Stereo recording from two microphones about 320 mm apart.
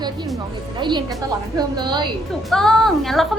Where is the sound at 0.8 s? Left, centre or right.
Centre.